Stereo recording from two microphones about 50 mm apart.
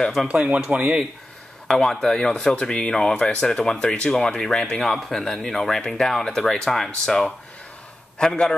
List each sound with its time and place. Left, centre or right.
0.3 s speech: right
1.7 s speech: centre